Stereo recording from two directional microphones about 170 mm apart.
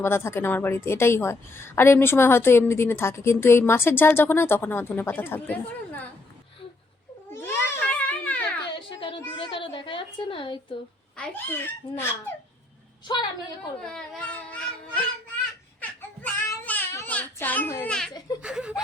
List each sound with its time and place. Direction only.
0.0 s a woman's voice: 15° left (ahead or behind)
7.3 s a sound: 15° left (ahead or behind)
8.9 s a sound: 30° left (ahead or behind)
11.2 s a woman's voice: 10° left (ahead or behind)
13.8 s a woman's voice: 5° left (ahead or behind)
15.8 s child singing: 10° left (ahead or behind)
18.4 s speech: 5° right (ahead or behind)